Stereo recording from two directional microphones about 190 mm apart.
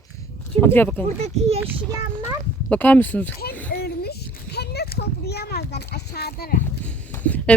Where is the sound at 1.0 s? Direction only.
35° right (ahead or behind).